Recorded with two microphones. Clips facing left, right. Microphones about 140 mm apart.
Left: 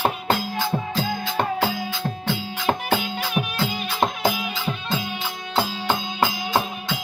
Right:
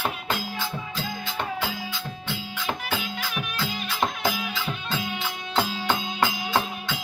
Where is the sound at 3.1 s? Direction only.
30° left (ahead or behind).